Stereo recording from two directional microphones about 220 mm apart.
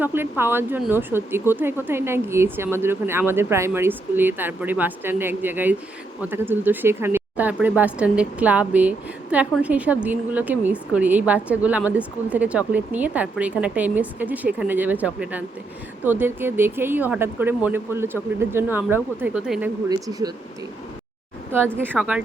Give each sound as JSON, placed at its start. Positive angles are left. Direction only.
{"t": 0.0, "sound": "speech", "side_deg": -10}
{"t": 19.9, "sound": "speech", "side_deg": -15}
{"t": 21.5, "sound": "speech", "side_deg": -10}